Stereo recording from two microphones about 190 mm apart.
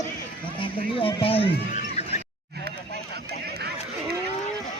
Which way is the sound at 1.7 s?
35° left (ahead or behind).